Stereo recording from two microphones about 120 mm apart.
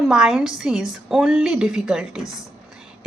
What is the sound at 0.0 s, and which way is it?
A woman's voice, 5° right (ahead or behind).